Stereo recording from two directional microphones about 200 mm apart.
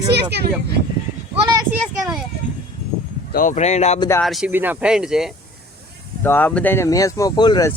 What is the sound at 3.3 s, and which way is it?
Speech, 40° left (ahead or behind).